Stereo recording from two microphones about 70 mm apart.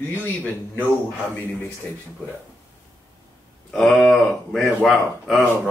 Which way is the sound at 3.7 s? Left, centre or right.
Centre.